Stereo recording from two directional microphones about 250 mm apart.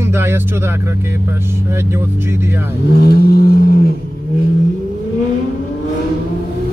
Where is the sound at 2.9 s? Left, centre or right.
Left.